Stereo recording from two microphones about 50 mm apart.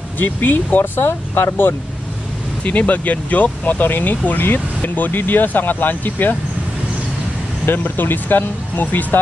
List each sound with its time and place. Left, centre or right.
0.2 s speech: left
2.6 s speech: left
7.6 s speech: left